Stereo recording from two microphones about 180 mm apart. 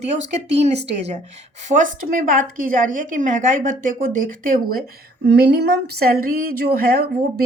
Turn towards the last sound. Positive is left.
turn(degrees=-55)  # may be behind; listen again after turning